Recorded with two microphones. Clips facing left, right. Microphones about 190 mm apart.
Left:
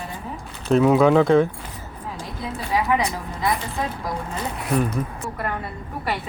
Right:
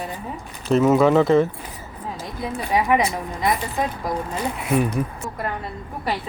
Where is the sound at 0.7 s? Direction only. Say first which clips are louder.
Even; centre (ahead or behind).